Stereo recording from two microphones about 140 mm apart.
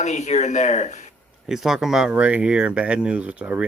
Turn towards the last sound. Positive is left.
turn(degrees=-10)  # may be behind; listen again after turning